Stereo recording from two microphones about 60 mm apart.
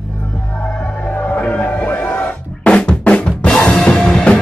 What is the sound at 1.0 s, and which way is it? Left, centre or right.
Music, left.